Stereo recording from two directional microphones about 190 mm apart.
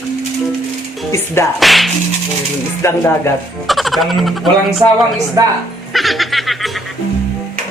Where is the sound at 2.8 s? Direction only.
15° left (ahead or behind).